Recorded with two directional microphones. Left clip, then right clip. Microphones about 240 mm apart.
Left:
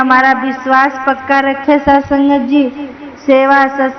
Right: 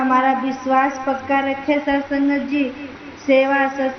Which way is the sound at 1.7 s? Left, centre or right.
Left.